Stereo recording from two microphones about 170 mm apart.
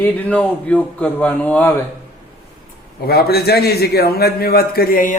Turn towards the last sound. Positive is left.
turn(degrees=55)  # may be behind; listen again after turning